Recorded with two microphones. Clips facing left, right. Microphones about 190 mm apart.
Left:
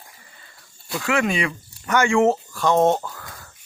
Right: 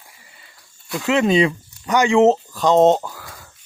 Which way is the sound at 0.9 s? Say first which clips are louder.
Right 5 dB; 20° right (ahead or behind).